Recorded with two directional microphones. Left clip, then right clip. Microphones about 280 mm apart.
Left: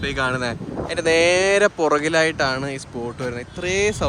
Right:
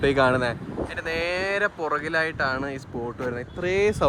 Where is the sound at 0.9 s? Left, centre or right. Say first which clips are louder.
Left 11 dB; centre.